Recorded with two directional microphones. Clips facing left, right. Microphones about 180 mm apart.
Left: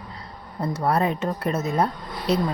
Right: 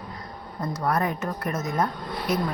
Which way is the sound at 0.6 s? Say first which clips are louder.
Left 3 dB; 30° left (ahead or behind).